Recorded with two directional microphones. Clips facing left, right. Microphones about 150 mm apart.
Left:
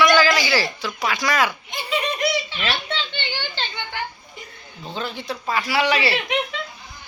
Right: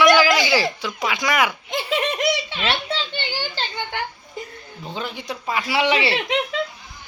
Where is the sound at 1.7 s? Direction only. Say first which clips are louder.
Right 3 dB; 90° right.